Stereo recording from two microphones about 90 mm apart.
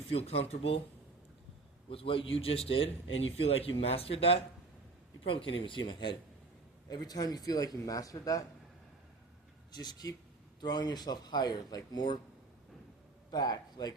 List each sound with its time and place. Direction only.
0.1 s a man's voice: 90° left
1.9 s a man's voice: 90° left
5.2 s speech: 75° left (ahead or behind); by 6.1 s 55° left (ahead or behind)
6.8 s speech: 45° left (ahead or behind)
9.7 s speech: 50° left (ahead or behind)
13.3 s speech: 50° left (ahead or behind)